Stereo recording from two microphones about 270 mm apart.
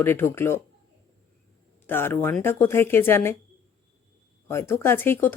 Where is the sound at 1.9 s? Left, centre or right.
Centre.